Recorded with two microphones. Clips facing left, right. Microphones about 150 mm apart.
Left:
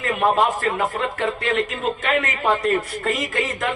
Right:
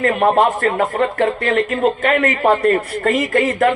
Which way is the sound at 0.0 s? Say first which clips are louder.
Right 5 dB; 55° right (ahead or behind).